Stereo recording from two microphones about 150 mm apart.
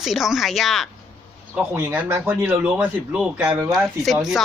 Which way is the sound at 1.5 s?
15° right (ahead or behind).